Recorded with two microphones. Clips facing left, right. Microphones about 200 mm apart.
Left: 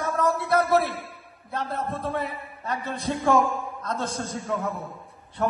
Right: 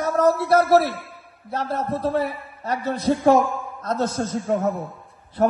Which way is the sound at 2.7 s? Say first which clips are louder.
Right 7 dB; 40° right (ahead or behind).